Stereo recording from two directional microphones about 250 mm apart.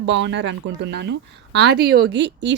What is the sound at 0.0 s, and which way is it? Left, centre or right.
Speech, right.